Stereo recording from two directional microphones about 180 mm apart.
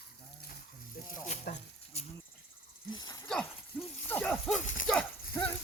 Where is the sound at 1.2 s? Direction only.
40° left (ahead or behind).